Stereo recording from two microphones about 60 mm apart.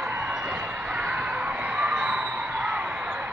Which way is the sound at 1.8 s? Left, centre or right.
Centre.